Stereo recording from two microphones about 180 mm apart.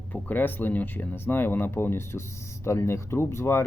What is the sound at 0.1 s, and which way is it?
Speech, 10° left (ahead or behind).